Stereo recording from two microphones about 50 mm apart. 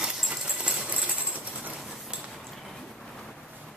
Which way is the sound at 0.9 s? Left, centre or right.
Right.